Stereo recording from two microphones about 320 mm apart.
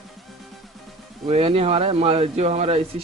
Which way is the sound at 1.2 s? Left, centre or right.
Centre.